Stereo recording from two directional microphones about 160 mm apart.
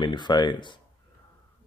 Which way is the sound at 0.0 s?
30° left (ahead or behind).